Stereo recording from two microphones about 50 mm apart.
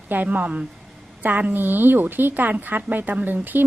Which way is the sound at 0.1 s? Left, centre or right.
Right.